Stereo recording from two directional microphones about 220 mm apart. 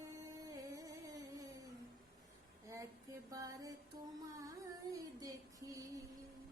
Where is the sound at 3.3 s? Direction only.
15° right (ahead or behind).